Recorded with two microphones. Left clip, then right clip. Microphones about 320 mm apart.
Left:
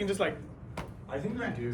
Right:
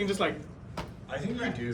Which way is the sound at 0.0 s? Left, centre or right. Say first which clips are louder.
Right 1 dB; centre.